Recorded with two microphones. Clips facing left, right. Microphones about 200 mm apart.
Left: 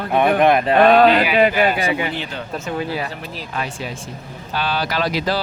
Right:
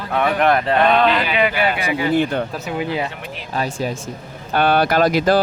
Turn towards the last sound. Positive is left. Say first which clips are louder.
# right 6 dB
turn(degrees=-50)  # may be behind; listen again after turning